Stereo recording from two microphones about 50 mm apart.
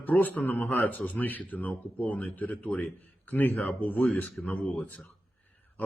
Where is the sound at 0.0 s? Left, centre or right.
Left.